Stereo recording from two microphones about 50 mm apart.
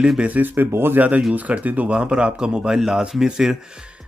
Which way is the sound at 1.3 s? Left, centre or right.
Right.